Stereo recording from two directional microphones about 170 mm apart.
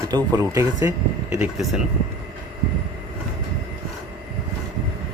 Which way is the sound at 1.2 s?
10° right (ahead or behind).